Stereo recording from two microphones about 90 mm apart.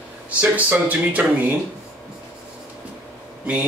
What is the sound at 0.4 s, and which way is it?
Speech, 15° right (ahead or behind).